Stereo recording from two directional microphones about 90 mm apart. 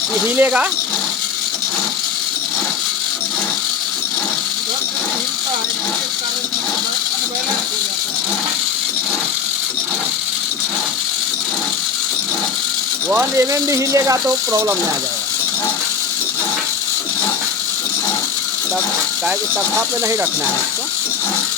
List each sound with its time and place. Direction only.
0.3 s speech: 20° right (ahead or behind)
13.1 s speech: 25° right (ahead or behind)